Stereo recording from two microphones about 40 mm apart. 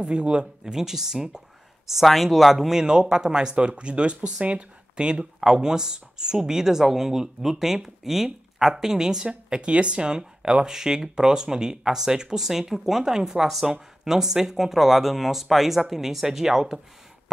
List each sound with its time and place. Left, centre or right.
0.0 s speech: right
0.7 s speech: centre
2.8 s speech: centre
9.5 s speech: right; by 16.8 s centre